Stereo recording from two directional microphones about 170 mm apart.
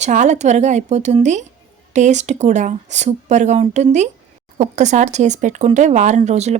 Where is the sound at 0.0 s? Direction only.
45° right (ahead or behind).